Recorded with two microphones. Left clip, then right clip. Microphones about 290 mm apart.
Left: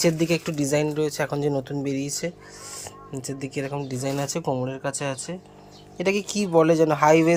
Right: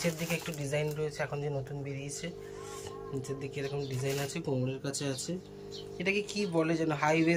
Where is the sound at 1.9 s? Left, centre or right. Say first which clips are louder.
Left 12 dB; centre.